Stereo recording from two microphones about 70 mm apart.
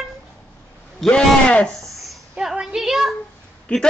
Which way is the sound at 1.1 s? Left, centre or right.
Centre.